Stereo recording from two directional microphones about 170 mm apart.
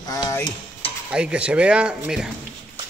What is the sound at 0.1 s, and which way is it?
Stir, 15° left (ahead or behind).